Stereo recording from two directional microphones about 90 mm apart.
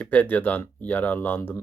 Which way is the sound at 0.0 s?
20° left (ahead or behind).